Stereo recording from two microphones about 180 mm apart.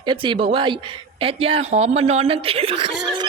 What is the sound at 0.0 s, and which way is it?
Speech, 25° right (ahead or behind).